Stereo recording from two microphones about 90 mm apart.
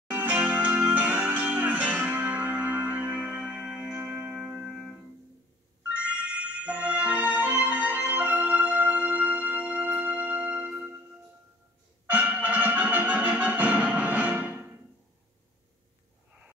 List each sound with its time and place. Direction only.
0.1 s music: 15° right (ahead or behind)
4.4 s music: 10° right (ahead or behind)
6.6 s music: 15° right (ahead or behind)
12.1 s music: 20° right (ahead or behind)